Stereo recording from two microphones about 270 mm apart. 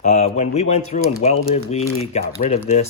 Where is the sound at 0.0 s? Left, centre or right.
Left.